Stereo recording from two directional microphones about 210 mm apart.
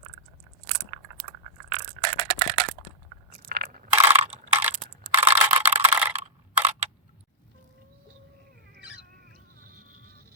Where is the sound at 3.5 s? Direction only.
50° right (ahead or behind).